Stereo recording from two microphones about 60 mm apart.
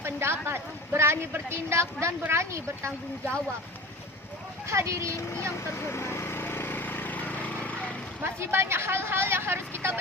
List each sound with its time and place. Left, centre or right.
0.0 s a sound: right
2.3 s speech: right
4.7 s speech: right
5.7 s vehicle: left
8.2 s speech: right